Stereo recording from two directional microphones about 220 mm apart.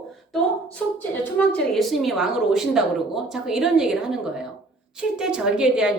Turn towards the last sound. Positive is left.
turn(degrees=-5)  # may be behind; listen again after turning